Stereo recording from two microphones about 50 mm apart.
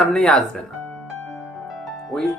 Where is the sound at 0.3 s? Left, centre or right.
Centre.